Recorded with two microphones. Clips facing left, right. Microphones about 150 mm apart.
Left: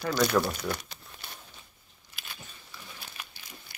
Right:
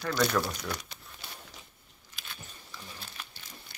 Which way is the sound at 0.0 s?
10° left (ahead or behind).